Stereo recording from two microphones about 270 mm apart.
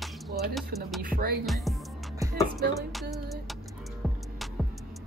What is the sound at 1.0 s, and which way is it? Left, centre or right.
Music, right.